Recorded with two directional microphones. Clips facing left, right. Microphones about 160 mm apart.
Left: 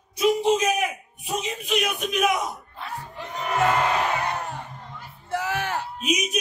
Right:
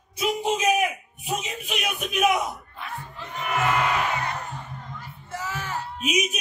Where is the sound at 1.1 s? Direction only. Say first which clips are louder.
Left 3 dB; 5° right (ahead or behind).